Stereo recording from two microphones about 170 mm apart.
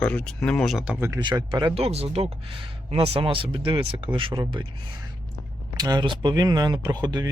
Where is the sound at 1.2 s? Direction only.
25° right (ahead or behind).